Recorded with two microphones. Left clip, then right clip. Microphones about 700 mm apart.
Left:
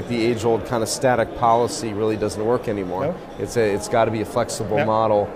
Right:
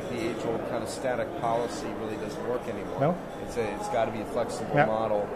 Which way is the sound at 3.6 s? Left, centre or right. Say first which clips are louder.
Left 9 dB; left.